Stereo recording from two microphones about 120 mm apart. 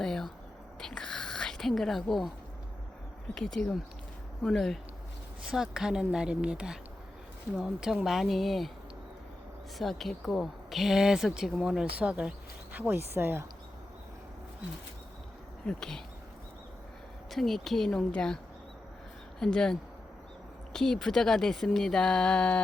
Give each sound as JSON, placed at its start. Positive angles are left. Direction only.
{"t": 0.0, "sound": "a sound", "side_deg": 5}
{"t": 0.8, "sound": "whispering", "side_deg": 5}
{"t": 3.3, "sound": "speech", "side_deg": 5}
{"t": 9.7, "sound": "speech", "side_deg": 0}
{"t": 15.6, "sound": "speech", "side_deg": 5}
{"t": 17.3, "sound": "speech", "side_deg": 0}
{"t": 19.4, "sound": "speech", "side_deg": 5}